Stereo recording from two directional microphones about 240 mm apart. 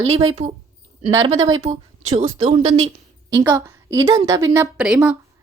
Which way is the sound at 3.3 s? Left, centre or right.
Centre.